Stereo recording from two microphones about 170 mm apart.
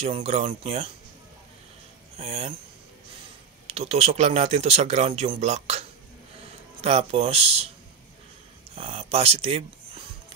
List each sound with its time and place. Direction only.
0.0 s speech: 35° right (ahead or behind)
2.1 s speech: 40° right (ahead or behind)
3.6 s speech: 40° right (ahead or behind)
8.7 s speech: 35° right (ahead or behind)